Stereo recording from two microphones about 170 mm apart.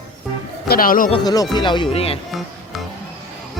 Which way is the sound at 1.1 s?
25° left (ahead or behind).